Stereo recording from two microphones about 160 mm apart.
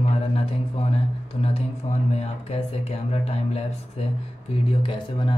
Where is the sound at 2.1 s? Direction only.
40° left (ahead or behind).